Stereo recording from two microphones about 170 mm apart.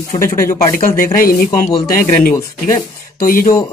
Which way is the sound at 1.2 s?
60° left (ahead or behind).